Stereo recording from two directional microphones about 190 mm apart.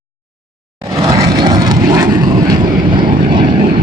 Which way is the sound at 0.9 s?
15° right (ahead or behind).